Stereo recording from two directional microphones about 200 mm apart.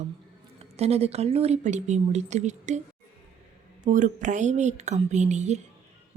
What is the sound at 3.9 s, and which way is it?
A woman's voice, 40° right (ahead or behind).